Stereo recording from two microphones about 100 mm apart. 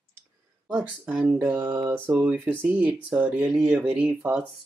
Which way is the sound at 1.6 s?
25° right (ahead or behind).